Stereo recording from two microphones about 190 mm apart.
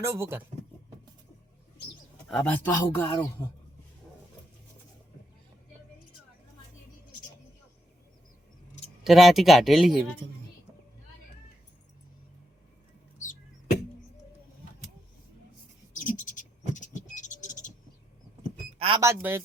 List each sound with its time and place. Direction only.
0.0 s speech: 15° right (ahead or behind)
2.3 s speech: 10° left (ahead or behind)
9.0 s speech: centre (ahead or behind)
13.1 s chop: 40° left (ahead or behind)
15.9 s a sound: 40° left (ahead or behind)
18.8 s a sound: 25° right (ahead or behind)
19.0 s speech: 15° right (ahead or behind)